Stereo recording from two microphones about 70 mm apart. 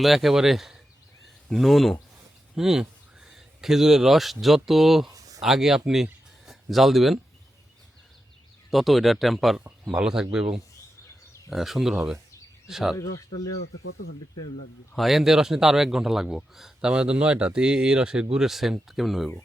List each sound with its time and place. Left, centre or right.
0.0 s a man's voice: centre
5.1 s a sound: right
5.4 s speech: centre
8.7 s a man's voice: centre
14.9 s a man's voice: centre